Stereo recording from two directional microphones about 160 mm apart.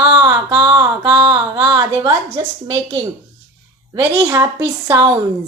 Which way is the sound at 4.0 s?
10° right (ahead or behind).